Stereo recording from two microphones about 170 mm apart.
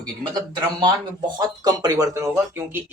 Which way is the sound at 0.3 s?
25° right (ahead or behind).